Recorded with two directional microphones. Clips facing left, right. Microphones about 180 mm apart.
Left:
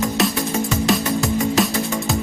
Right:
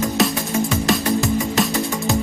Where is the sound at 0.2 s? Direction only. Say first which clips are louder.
Right 1 dB; centre (ahead or behind).